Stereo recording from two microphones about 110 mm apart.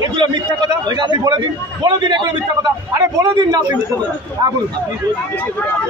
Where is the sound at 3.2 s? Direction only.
40° right (ahead or behind).